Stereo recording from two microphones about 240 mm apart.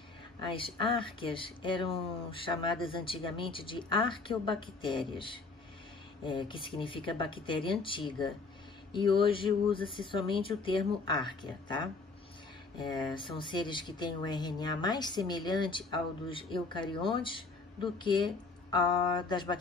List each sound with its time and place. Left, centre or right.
0.5 s speech: left
8.9 s speech: left
13.3 s speech: centre